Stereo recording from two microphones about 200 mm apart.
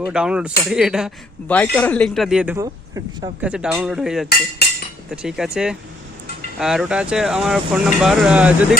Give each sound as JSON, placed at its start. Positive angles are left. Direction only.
{"t": 0.1, "sound": "speech", "side_deg": -5}
{"t": 2.6, "sound": "speech", "side_deg": -15}
{"t": 3.5, "sound": "speech", "side_deg": -5}